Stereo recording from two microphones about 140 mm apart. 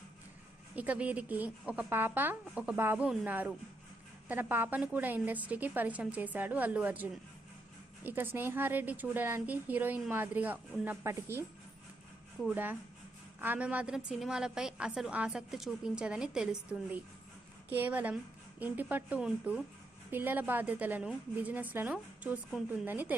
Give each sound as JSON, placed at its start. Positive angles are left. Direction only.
{"t": 0.8, "sound": "a woman's voice", "side_deg": -10}
{"t": 12.4, "sound": "a woman's voice", "side_deg": 0}
{"t": 13.4, "sound": "a woman's voice", "side_deg": -10}